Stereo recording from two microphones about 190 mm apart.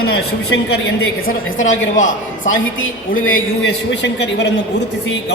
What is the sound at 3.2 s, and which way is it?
Speech, 90° left.